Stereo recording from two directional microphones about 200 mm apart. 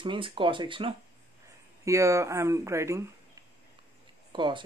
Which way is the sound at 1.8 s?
15° right (ahead or behind).